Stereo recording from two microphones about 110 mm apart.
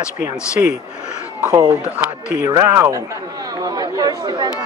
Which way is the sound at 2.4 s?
35° right (ahead or behind).